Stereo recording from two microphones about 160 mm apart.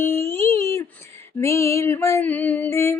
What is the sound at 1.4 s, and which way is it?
Female singing, 15° left (ahead or behind).